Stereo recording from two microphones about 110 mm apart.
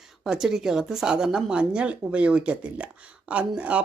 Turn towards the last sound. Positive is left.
turn(degrees=-10)  # may be behind; listen again after turning